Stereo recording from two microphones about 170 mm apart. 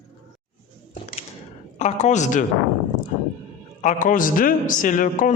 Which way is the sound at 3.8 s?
50° left (ahead or behind).